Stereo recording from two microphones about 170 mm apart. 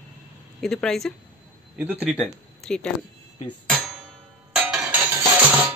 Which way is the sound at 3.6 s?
Centre (ahead or behind).